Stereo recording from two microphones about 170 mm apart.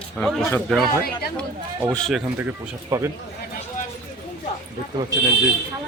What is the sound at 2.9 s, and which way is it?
Speech, 20° right (ahead or behind).